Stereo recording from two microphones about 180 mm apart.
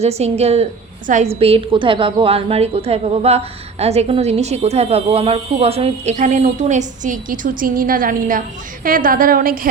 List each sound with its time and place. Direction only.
0.0 s a woman's voice: 35° right (ahead or behind); by 9.6 s 50° right (ahead or behind)